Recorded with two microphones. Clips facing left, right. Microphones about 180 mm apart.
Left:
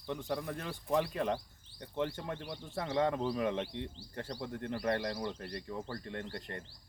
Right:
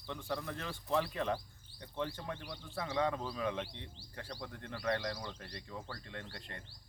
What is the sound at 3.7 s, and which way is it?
Speech, 50° left (ahead or behind).